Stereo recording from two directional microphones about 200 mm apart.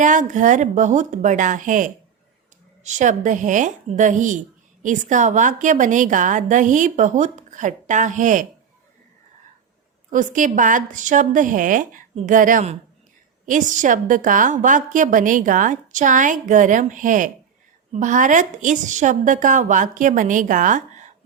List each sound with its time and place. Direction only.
0.0 s a woman's voice: 40° right (ahead or behind)
10.1 s a woman's voice: 40° right (ahead or behind)